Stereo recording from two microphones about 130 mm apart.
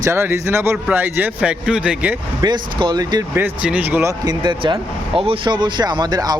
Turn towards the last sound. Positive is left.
turn(degrees=-30)  # may be behind; listen again after turning